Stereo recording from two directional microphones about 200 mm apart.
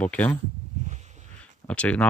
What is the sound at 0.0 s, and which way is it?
Speech, 5° left (ahead or behind).